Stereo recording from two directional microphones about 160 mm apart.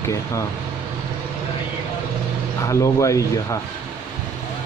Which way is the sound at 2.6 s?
20° left (ahead or behind).